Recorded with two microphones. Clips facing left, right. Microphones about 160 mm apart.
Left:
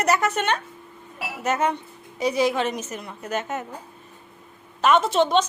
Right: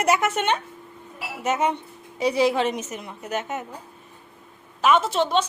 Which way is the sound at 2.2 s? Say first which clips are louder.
Right 1 dB; 30° right (ahead or behind).